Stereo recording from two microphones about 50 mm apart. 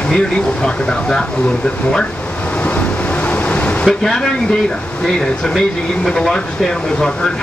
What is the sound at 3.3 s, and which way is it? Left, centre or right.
Vehicle, left.